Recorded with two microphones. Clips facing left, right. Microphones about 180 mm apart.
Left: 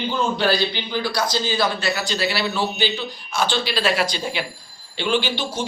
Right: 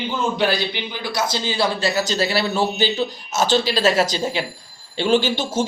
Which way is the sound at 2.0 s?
40° right (ahead or behind).